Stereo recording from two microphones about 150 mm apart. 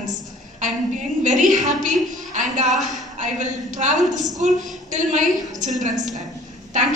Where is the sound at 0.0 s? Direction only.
55° right (ahead or behind).